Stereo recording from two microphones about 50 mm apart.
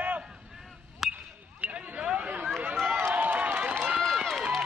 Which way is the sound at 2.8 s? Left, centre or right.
Right.